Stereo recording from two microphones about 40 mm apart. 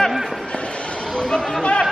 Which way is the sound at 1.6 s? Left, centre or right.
Left.